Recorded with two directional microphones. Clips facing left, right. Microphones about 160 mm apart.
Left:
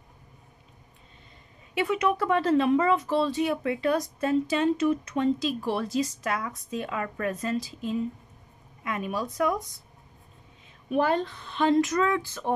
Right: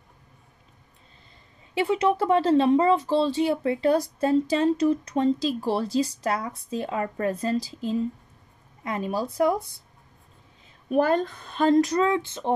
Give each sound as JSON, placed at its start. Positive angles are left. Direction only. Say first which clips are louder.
{"t": 1.8, "sound": "speech", "louder": "right 3 dB", "side_deg": -30}
{"t": 10.9, "sound": "speech", "louder": "right 3 dB", "side_deg": -45}